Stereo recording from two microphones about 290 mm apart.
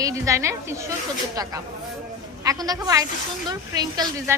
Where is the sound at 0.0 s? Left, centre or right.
Centre.